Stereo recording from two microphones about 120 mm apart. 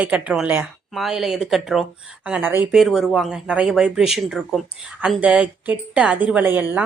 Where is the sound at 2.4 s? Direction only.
20° right (ahead or behind).